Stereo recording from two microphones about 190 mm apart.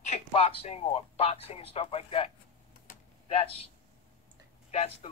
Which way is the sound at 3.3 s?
30° left (ahead or behind).